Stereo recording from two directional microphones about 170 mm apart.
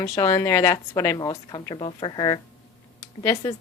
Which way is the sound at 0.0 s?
20° left (ahead or behind).